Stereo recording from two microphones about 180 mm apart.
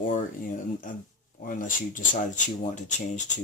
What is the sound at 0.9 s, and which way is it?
Speech, 45° left (ahead or behind).